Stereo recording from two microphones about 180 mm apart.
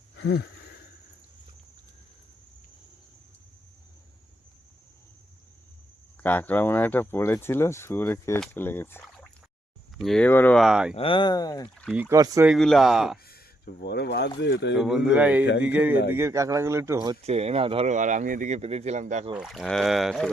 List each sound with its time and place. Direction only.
0.2 s a sound: 70° left (ahead or behind)
6.2 s speech: 10° left (ahead or behind)
10.9 s speech: 30° left (ahead or behind)
11.7 s speech: 5° left (ahead or behind)
11.9 s speech: 15° right (ahead or behind)
12.5 s speech: centre (ahead or behind)
13.2 s speech: 60° left (ahead or behind); by 14.8 s 75° left (ahead or behind)
14.8 s speech: 5° right (ahead or behind); by 17.2 s 20° right (ahead or behind)
17.2 s speech: 35° right (ahead or behind)
19.4 s speech: centre (ahead or behind)